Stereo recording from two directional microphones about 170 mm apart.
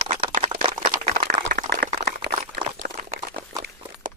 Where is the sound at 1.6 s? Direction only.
70° right (ahead or behind).